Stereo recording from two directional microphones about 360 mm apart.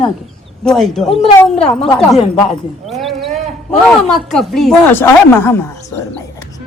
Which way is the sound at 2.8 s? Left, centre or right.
Centre.